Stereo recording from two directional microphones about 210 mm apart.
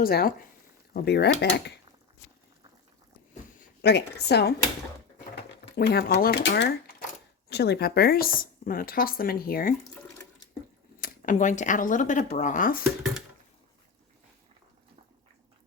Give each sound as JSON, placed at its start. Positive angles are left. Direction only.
{"t": 0.0, "sound": "speech", "side_deg": 45}
{"t": 3.8, "sound": "speech", "side_deg": 50}
{"t": 5.7, "sound": "speech", "side_deg": 50}
{"t": 11.0, "sound": "speech", "side_deg": 35}